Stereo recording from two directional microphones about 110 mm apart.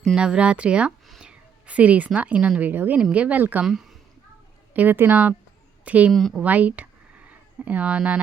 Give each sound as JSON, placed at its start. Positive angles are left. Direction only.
{"t": 0.1, "sound": "a woman's voice", "side_deg": -10}
{"t": 3.7, "sound": "speech", "side_deg": 0}
{"t": 4.7, "sound": "speech", "side_deg": -15}
{"t": 6.1, "sound": "speech", "side_deg": 0}
{"t": 6.4, "sound": "speech", "side_deg": -15}